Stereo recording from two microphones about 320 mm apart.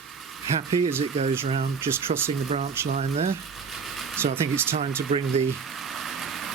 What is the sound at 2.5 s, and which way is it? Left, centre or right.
Speech, right.